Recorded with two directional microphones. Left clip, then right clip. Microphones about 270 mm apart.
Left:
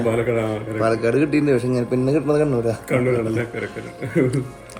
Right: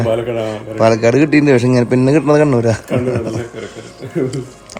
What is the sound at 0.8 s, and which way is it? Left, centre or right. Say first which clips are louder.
A man's voice: right 8 dB; right.